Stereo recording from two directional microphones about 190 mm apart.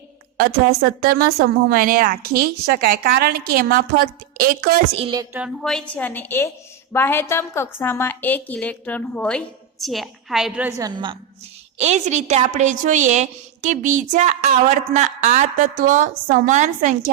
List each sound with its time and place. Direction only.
0.3 s a woman's voice: 50° right (ahead or behind)
4.9 s a woman's voice: 25° right (ahead or behind)
5.6 s a woman's voice: 5° left (ahead or behind); by 11.2 s 25° right (ahead or behind)
11.8 s a woman's voice: 35° right (ahead or behind)